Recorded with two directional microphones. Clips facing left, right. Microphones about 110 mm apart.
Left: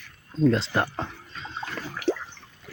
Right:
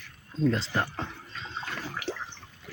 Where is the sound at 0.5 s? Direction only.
65° left (ahead or behind).